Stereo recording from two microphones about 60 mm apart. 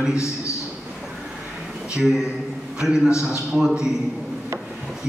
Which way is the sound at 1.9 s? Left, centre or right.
Centre.